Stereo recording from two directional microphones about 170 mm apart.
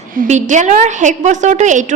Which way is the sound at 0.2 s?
45° right (ahead or behind).